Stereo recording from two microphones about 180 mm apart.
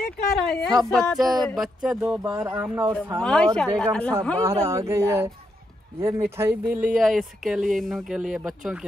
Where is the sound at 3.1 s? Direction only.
5° left (ahead or behind).